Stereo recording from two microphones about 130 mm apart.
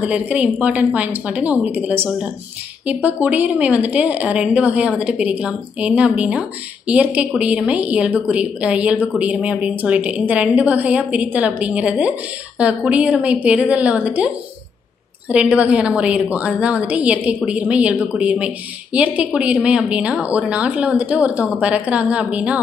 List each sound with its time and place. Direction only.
0.0 s a woman's voice: 10° right (ahead or behind)
15.4 s a woman's voice: 10° right (ahead or behind)